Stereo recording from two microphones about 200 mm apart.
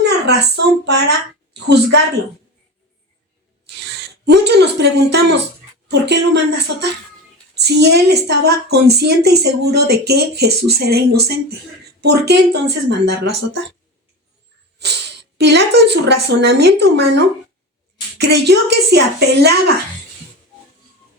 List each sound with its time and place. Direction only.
0.3 s a woman's voice: 55° right (ahead or behind)
4.3 s a woman's voice: 55° right (ahead or behind)
14.8 s speech: 55° right (ahead or behind)